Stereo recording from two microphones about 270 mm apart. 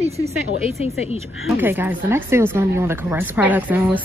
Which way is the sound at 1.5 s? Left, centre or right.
Centre.